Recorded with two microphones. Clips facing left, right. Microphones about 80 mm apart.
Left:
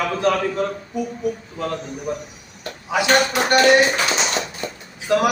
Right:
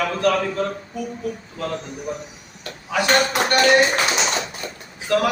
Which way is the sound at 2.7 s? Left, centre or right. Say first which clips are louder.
Left 2 dB; centre.